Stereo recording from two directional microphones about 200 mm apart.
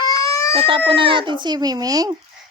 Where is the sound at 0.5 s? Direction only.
30° right (ahead or behind).